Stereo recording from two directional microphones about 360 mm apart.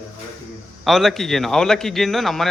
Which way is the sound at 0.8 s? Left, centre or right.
Centre.